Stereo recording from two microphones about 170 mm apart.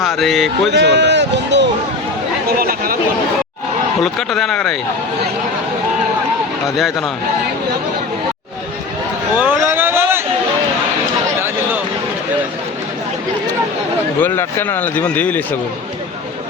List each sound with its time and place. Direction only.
0.2 s speech: centre (ahead or behind)
0.7 s speech: 90° right
2.5 s chatter: 60° right (ahead or behind)
4.0 s speech: centre (ahead or behind)
6.7 s speech: centre (ahead or behind)
9.4 s a sound: 15° right (ahead or behind)
11.3 s a sound: 15° right (ahead or behind)
14.2 s speech: 10° left (ahead or behind)